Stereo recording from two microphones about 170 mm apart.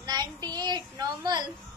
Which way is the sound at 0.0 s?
25° right (ahead or behind).